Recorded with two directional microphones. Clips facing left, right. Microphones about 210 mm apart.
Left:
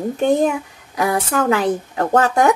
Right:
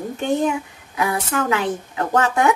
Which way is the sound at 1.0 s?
40° left (ahead or behind).